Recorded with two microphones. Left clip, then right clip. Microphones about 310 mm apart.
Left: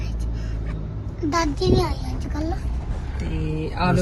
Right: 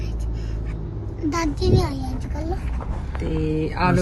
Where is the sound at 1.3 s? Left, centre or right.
Centre.